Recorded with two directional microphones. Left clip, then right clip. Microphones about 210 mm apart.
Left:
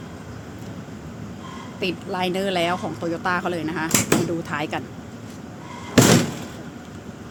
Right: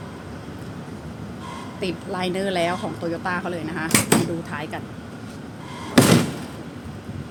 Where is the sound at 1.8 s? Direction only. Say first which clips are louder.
Left 2 dB; 10° left (ahead or behind).